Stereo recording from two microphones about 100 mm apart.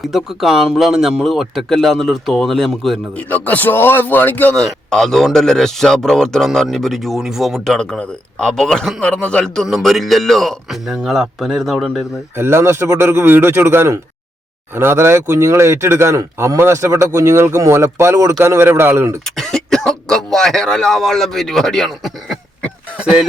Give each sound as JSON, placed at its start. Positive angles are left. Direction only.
{"t": 0.1, "sound": "speech", "side_deg": 0}
{"t": 3.2, "sound": "a man's voice", "side_deg": 15}
{"t": 4.5, "sound": "a man's voice", "side_deg": 5}
{"t": 12.4, "sound": "speech", "side_deg": -25}
{"t": 19.2, "sound": "speech", "side_deg": 5}